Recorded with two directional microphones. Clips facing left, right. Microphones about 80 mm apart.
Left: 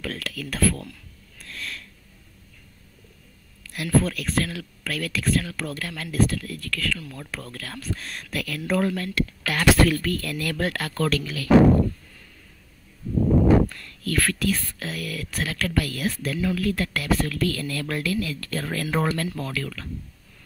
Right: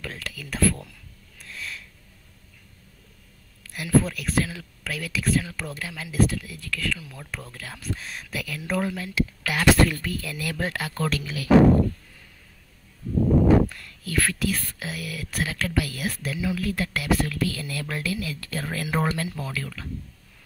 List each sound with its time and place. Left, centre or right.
0.0 s speech: centre
1.4 s sniff: centre
3.7 s speech: centre
13.7 s a sound: centre
14.1 s speech: centre